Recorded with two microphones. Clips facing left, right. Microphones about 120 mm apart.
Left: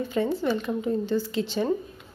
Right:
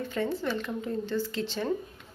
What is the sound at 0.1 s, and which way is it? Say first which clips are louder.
Speech: left 5 dB; 10° left (ahead or behind).